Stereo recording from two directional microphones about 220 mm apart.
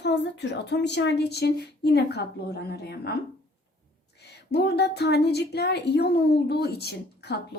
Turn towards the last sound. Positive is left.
turn(degrees=45)  # may be behind; listen again after turning